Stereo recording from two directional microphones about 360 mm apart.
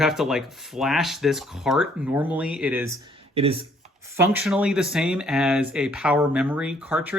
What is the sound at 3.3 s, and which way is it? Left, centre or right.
Speech, centre.